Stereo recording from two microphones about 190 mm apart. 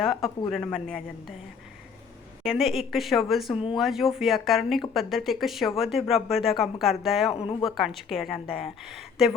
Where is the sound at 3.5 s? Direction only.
25° left (ahead or behind).